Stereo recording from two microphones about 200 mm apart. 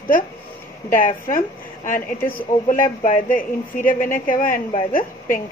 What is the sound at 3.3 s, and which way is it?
A woman's voice, 45° left (ahead or behind).